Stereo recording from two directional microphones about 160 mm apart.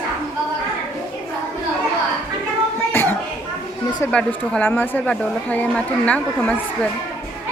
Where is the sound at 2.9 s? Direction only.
15° left (ahead or behind).